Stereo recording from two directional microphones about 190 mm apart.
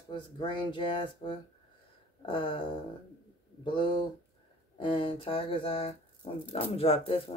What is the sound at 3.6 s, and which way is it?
Speech, 25° left (ahead or behind).